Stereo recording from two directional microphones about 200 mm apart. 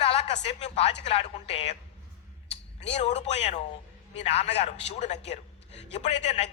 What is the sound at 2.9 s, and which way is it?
A man's voice, 30° left (ahead or behind).